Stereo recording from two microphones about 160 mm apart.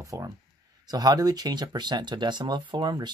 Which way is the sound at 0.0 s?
20° right (ahead or behind).